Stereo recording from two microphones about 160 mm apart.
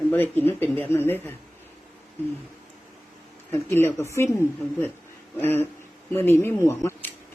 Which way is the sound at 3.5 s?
15° left (ahead or behind).